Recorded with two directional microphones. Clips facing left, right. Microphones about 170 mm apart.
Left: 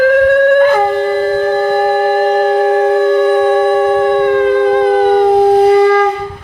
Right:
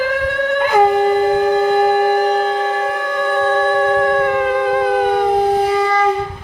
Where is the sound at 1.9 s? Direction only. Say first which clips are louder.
Left 3 dB; 45° left (ahead or behind); by 4.4 s centre (ahead or behind).